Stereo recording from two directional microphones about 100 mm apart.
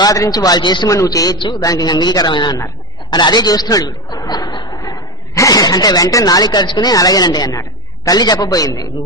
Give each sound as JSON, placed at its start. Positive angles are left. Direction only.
{"t": 0.0, "sound": "a man's voice", "side_deg": 40}
{"t": 0.8, "sound": "a man's voice", "side_deg": 35}